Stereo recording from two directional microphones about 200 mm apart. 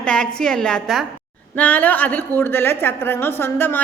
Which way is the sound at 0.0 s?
5° left (ahead or behind).